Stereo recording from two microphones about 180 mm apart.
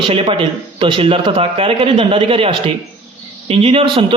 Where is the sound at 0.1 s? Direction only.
30° right (ahead or behind).